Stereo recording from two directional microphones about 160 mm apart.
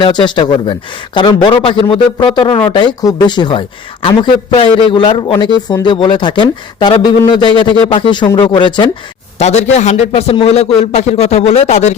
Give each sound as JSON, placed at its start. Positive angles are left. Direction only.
{"t": 0.0, "sound": "a man's voice", "side_deg": 30}
{"t": 9.4, "sound": "speech", "side_deg": 45}